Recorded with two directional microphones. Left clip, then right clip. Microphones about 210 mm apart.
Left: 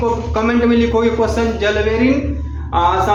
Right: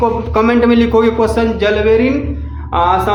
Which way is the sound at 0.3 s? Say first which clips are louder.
Right 5 dB; 45° right (ahead or behind).